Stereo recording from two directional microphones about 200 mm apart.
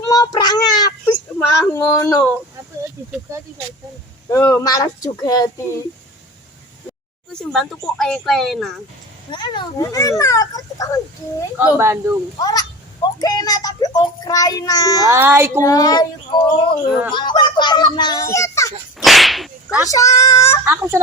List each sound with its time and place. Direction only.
0.1 s child singing: 20° left (ahead or behind)
1.6 s speech: 15° left (ahead or behind)
4.3 s speech: 15° left (ahead or behind)
7.5 s speech: 5° left (ahead or behind)
9.3 s speech: 20° left (ahead or behind)
11.5 s speech: 10° right (ahead or behind)
12.4 s a child's voice: 20° left (ahead or behind)
15.0 s speech: 10° right (ahead or behind)
15.6 s a child's voice: 20° left (ahead or behind)
18.9 s whip: centre (ahead or behind)
19.7 s speech: 15° left (ahead or behind)
20.7 s speech: 15° right (ahead or behind)